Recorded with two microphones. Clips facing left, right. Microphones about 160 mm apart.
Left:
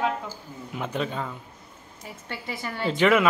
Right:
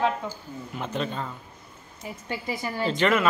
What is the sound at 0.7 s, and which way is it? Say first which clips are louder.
Speech: left 1 dB; 5° left (ahead or behind).